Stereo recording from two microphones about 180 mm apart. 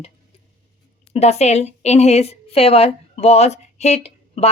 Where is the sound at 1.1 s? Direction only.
35° left (ahead or behind).